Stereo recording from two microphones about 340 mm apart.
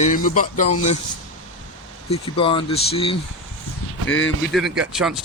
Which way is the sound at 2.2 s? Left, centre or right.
Centre.